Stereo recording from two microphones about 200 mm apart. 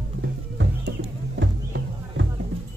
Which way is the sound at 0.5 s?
65° right (ahead or behind).